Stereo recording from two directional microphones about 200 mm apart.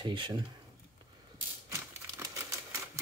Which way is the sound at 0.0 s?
25° right (ahead or behind).